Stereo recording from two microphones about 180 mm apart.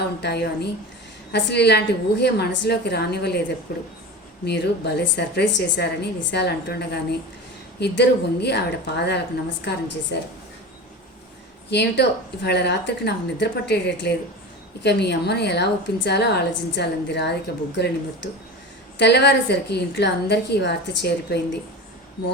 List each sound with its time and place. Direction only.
0.2 s a woman's voice: 65° left (ahead or behind)
11.7 s a woman's voice: 70° left (ahead or behind)
18.9 s a woman's voice: 70° left (ahead or behind)